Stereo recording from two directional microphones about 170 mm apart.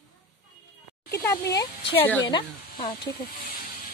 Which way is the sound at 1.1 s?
20° left (ahead or behind).